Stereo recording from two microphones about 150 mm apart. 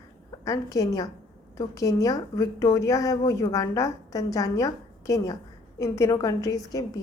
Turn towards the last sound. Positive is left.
turn(degrees=20)  # may be behind; listen again after turning